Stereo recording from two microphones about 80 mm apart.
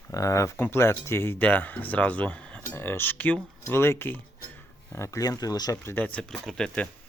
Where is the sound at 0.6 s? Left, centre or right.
Left.